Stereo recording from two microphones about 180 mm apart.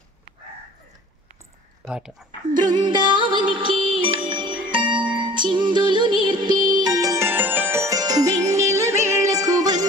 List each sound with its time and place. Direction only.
1.9 s speech: 5° right (ahead or behind)
2.5 s music: 25° right (ahead or behind)